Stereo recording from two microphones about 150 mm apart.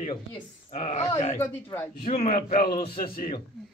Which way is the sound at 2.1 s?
45° left (ahead or behind).